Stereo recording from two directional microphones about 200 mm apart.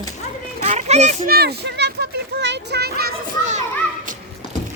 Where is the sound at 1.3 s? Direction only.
50° right (ahead or behind).